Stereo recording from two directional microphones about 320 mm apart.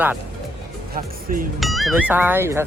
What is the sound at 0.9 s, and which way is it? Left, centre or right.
Speech, right.